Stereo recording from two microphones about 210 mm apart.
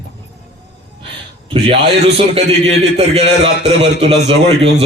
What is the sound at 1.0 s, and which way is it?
A man's voice, 25° right (ahead or behind).